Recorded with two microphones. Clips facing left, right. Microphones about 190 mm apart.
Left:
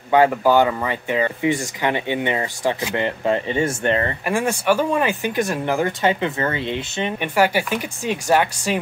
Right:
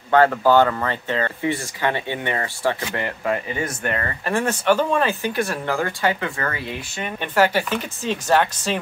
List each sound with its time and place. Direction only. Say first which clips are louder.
0.1 s speech: even; 15° left (ahead or behind)
4.3 s speech: right 1 dB; 10° left (ahead or behind)
7.2 s speech: even; 10° left (ahead or behind)